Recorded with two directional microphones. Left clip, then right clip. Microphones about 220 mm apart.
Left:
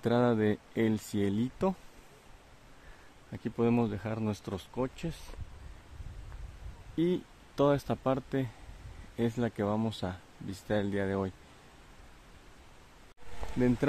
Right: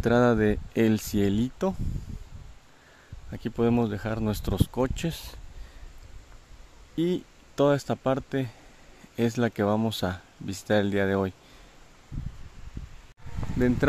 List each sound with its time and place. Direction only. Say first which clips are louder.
0.0 s speech: right 6 dB; 20° right (ahead or behind)
3.3 s speech: right 4 dB; 20° right (ahead or behind)
7.0 s speech: right 3 dB; 15° right (ahead or behind)
13.6 s speech: right 4 dB; 10° right (ahead or behind)